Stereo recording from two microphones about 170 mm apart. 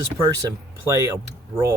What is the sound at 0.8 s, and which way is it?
Speech, 15° right (ahead or behind).